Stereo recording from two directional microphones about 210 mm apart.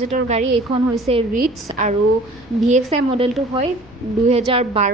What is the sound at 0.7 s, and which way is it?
A woman's voice, 25° right (ahead or behind).